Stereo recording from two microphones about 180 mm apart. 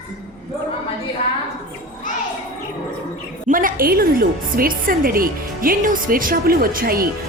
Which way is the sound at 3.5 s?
50° right (ahead or behind).